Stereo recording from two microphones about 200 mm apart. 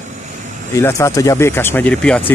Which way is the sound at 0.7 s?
15° left (ahead or behind).